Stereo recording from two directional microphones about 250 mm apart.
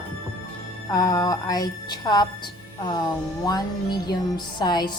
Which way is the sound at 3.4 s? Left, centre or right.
Centre.